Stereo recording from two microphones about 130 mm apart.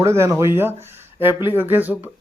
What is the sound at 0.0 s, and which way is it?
Speech, 20° right (ahead or behind).